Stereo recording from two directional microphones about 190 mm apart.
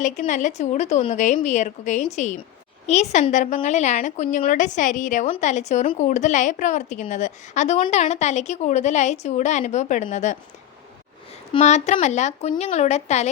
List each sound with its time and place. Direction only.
0.0 s a woman's voice: 40° left (ahead or behind)
11.5 s a woman's voice: 35° left (ahead or behind)